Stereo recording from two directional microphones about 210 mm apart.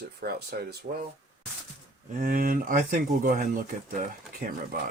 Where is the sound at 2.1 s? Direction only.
40° right (ahead or behind).